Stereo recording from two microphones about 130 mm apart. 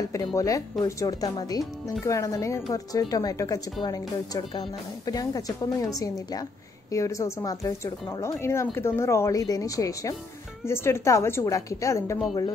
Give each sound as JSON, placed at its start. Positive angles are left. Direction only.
{"t": 0.1, "sound": "speech", "side_deg": 25}